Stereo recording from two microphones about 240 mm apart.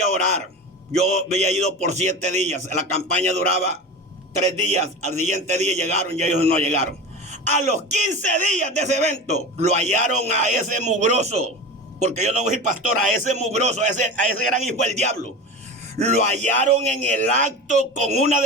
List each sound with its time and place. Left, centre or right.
1.0 s speech: right